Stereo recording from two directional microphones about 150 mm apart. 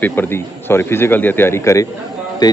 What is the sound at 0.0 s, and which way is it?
A man's voice, 15° left (ahead or behind).